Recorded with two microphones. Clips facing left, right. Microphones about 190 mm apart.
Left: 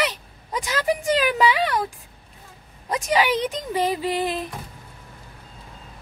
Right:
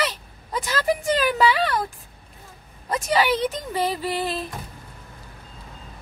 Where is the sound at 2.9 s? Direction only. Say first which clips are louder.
Even; 15° left (ahead or behind).